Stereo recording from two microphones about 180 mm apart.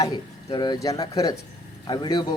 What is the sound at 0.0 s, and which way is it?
A man's voice, 25° left (ahead or behind).